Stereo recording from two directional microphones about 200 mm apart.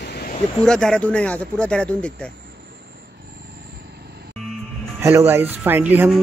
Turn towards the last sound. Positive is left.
turn(degrees=-5)  # may be behind; listen again after turning